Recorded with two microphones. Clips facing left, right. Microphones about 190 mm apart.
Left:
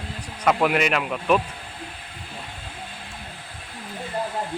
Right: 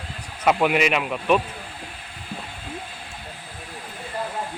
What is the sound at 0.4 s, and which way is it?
Speech, 5° right (ahead or behind).